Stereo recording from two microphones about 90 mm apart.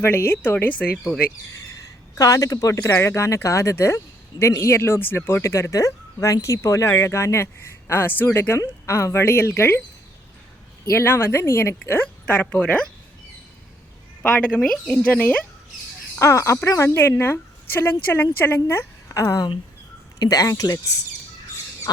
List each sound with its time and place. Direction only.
0.0 s speech: 25° left (ahead or behind)
2.1 s speech: 40° left (ahead or behind)
10.8 s speech: 30° left (ahead or behind)
11.9 s speech: 20° left (ahead or behind)
14.2 s a woman's voice: 15° left (ahead or behind)
16.1 s speech: 35° left (ahead or behind)